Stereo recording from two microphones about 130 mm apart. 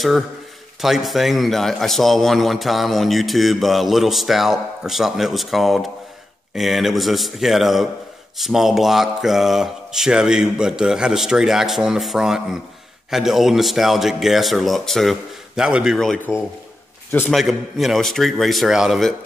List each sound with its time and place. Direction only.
0.7 s speech: centre (ahead or behind)
17.3 s speech: centre (ahead or behind)